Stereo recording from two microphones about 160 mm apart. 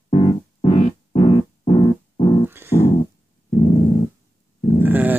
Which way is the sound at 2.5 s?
15° right (ahead or behind).